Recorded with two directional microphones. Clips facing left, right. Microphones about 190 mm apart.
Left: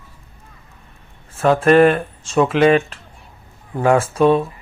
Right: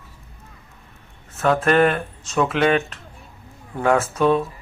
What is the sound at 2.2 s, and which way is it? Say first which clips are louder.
Speech: left 4 dB; 30° left (ahead or behind).